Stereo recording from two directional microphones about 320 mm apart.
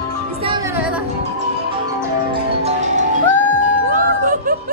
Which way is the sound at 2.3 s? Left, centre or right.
Right.